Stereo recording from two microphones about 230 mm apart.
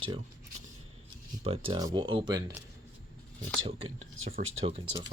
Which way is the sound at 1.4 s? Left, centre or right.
Right.